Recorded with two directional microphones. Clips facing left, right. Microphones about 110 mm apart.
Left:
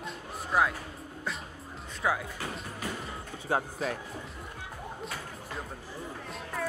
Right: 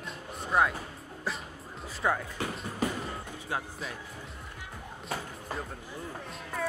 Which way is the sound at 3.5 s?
40° left (ahead or behind).